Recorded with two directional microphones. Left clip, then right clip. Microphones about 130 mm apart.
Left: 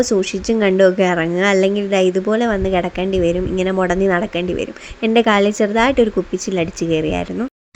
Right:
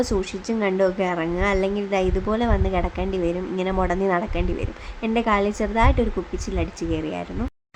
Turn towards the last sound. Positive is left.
turn(degrees=35)  # may be behind; listen again after turning